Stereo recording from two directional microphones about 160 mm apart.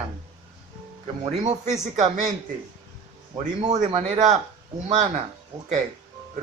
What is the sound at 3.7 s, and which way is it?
A man's voice, 45° right (ahead or behind).